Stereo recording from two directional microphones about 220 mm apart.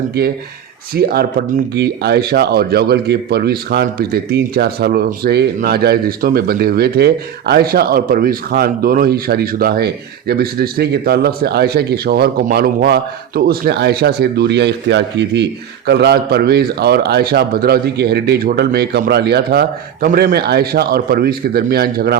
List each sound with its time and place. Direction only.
0.2 s speech: 45° right (ahead or behind)